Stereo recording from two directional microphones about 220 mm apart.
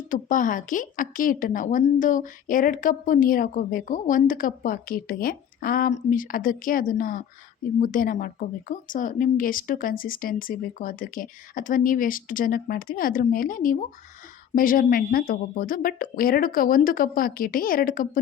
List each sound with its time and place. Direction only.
0.1 s a woman's voice: 35° left (ahead or behind)